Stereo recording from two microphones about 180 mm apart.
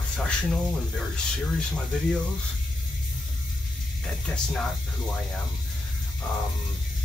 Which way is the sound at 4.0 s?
Centre (ahead or behind).